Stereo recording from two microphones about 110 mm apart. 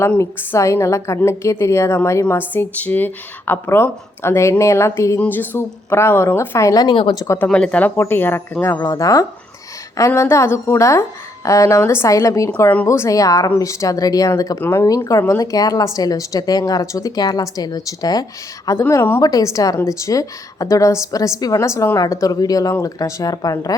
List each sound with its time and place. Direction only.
0.2 s speech: 25° left (ahead or behind)
6.9 s speech: 55° left (ahead or behind)
7.3 s speech: 10° left (ahead or behind); by 12.5 s 30° left (ahead or behind)
12.5 s a woman's voice: 20° left (ahead or behind); by 18.8 s 35° left (ahead or behind)
18.8 s a woman's voice: 25° left (ahead or behind)